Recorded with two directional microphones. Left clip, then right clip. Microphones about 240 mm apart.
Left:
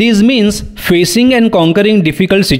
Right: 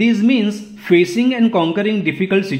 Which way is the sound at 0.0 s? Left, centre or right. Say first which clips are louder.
Left 6 dB; left.